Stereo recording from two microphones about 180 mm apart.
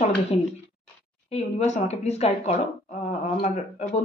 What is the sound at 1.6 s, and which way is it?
Speech, 40° left (ahead or behind).